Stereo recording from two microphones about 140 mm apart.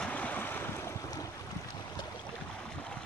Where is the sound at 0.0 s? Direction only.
10° left (ahead or behind).